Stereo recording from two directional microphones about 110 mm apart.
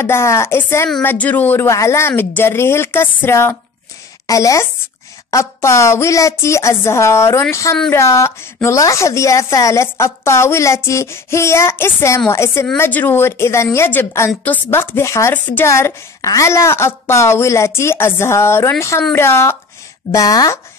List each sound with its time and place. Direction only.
0.0 s a woman's voice: 25° left (ahead or behind)
15.7 s a woman's voice: 30° left (ahead or behind)
20.1 s speech: 30° left (ahead or behind)